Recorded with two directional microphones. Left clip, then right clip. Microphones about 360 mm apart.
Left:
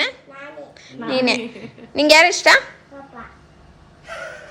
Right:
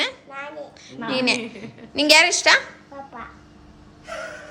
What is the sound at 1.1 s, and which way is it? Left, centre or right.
A woman's voice, centre.